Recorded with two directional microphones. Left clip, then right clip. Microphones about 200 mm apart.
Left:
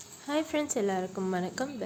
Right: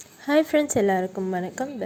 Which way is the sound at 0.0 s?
30° right (ahead or behind).